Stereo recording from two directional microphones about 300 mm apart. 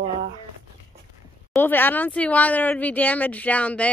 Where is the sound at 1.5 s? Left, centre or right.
Centre.